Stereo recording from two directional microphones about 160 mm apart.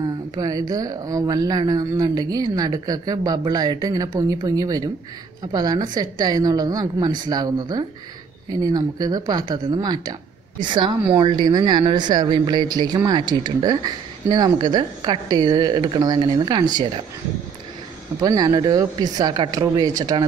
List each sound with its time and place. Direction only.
0.0 s a woman's voice: 25° right (ahead or behind)
18.2 s a woman's voice: 25° right (ahead or behind)